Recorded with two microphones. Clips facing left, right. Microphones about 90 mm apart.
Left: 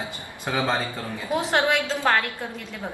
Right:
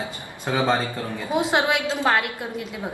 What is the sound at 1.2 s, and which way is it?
A woman's voice, 20° right (ahead or behind).